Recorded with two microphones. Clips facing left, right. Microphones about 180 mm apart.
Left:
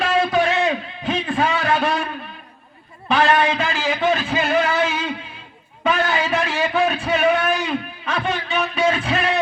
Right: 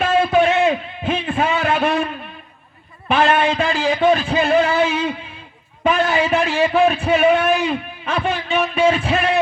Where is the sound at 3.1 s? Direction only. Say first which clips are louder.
Right 1 dB; 25° right (ahead or behind).